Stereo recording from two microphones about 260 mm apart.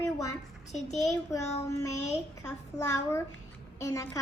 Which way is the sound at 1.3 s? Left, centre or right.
Centre.